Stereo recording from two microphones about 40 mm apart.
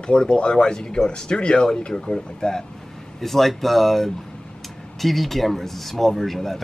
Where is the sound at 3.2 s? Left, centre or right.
Centre.